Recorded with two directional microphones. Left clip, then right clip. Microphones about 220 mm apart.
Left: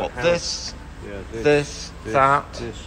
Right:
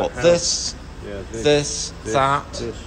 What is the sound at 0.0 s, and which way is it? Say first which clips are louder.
A man's voice: right 4 dB; 5° right (ahead or behind).